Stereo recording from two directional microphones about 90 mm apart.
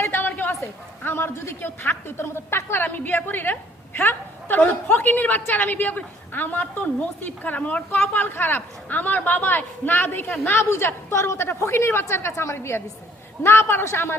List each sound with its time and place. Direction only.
0.0 s a woman's voice: 25° left (ahead or behind)